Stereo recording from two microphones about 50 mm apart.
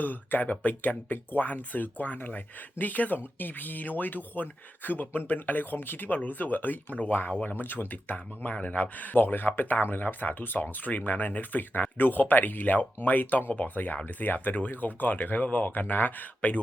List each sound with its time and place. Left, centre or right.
0.0 s speech: left